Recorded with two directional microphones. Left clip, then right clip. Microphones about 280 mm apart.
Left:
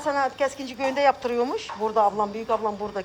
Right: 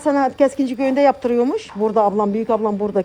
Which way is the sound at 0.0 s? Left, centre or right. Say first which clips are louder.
Right 8 dB; centre.